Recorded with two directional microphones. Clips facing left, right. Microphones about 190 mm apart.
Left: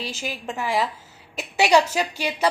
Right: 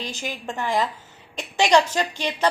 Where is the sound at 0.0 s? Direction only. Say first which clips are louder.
Even; 5° left (ahead or behind).